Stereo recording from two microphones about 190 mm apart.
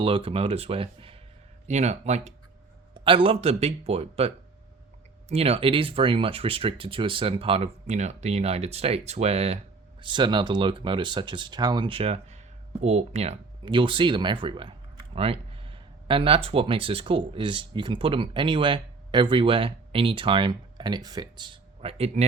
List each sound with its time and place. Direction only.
0.0 s speech: 30° right (ahead or behind)
5.3 s speech: 30° right (ahead or behind)